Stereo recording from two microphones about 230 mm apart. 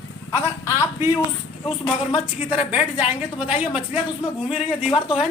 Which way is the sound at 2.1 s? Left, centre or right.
Centre.